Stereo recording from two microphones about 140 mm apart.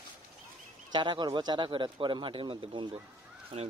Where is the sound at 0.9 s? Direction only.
35° right (ahead or behind).